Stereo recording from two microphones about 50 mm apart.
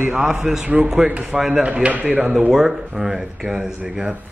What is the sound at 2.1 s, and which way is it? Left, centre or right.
Speech, centre.